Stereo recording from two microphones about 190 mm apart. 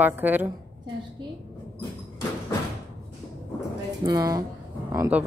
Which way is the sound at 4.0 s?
20° right (ahead or behind).